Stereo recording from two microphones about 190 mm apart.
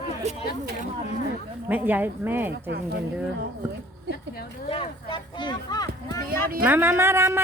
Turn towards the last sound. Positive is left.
turn(degrees=-15)  # may be behind; listen again after turning